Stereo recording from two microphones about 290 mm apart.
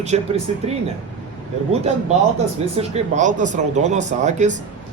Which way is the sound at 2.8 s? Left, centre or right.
Right.